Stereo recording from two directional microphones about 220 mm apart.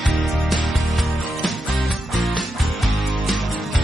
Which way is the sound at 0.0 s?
Centre (ahead or behind).